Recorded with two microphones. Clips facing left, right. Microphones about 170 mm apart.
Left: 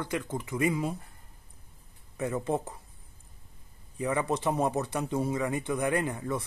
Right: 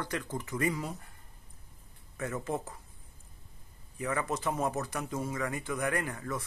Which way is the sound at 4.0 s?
20° left (ahead or behind).